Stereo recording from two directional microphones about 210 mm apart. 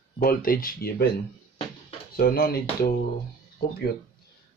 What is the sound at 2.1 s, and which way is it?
Speech, 45° left (ahead or behind).